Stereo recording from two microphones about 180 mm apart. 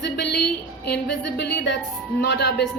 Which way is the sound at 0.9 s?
70° left (ahead or behind).